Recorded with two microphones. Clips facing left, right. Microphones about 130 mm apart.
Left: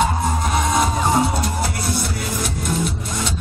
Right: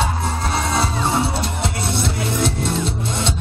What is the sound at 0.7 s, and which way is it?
Music, 30° right (ahead or behind).